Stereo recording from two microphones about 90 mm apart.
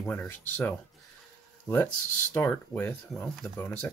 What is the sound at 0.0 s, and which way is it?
Speech, 20° left (ahead or behind).